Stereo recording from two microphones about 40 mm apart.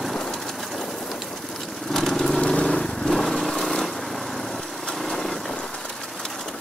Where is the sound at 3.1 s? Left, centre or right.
Centre.